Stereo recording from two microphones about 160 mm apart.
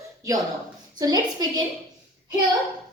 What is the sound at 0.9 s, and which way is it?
Speech, 25° right (ahead or behind).